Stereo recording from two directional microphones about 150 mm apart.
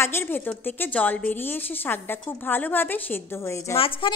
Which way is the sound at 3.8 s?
35° left (ahead or behind).